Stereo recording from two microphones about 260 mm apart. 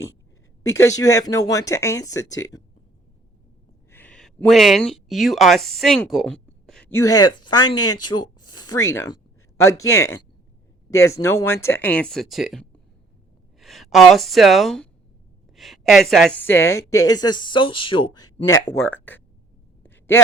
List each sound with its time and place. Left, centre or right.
0.7 s speech: centre
3.9 s speech: centre
7.1 s speech: centre
18.9 s speech: centre
19.8 s a sound: centre